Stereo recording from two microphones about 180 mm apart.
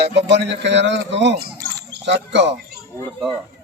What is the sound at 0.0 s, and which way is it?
Speech, 70° right (ahead or behind).